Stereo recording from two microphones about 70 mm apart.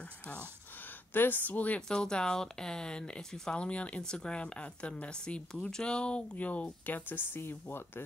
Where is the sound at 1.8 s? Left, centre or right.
Centre.